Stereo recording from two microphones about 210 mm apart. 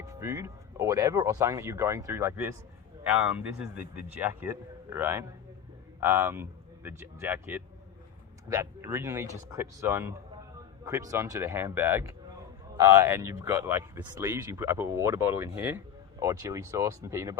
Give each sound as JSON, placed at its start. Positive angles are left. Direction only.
{"t": 0.0, "sound": "speech", "side_deg": -15}